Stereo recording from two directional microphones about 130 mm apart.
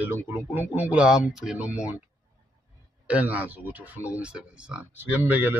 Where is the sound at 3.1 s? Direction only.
10° right (ahead or behind).